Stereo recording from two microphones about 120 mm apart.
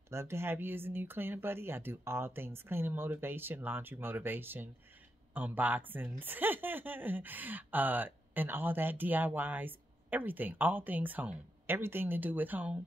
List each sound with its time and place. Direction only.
0.1 s speech: 20° right (ahead or behind)